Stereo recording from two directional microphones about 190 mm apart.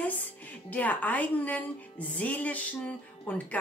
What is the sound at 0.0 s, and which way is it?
Speech, 10° left (ahead or behind).